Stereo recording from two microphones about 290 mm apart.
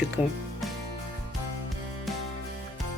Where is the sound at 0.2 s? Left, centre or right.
Left.